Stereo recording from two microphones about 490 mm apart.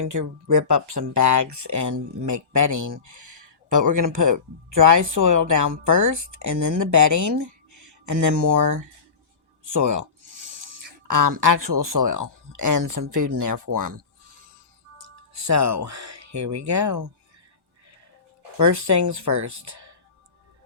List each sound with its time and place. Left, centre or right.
0.0 s speech: right
14.9 s speech: right
18.5 s speech: right